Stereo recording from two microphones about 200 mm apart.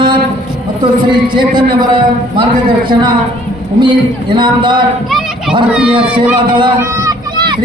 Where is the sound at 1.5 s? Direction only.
25° right (ahead or behind).